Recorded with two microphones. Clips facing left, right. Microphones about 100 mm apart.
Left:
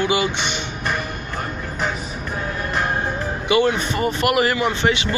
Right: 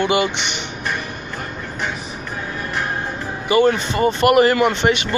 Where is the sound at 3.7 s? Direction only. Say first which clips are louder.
Right 3 dB; 25° right (ahead or behind).